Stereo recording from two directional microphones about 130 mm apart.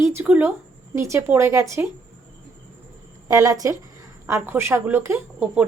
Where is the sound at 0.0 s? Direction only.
15° right (ahead or behind).